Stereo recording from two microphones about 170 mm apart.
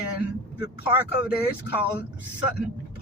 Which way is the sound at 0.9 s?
10° right (ahead or behind).